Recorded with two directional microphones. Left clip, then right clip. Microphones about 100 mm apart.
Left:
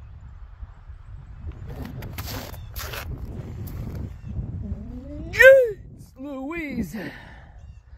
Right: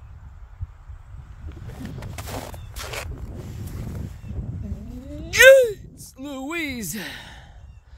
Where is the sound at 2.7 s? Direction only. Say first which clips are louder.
Right 2 dB; 55° left (ahead or behind).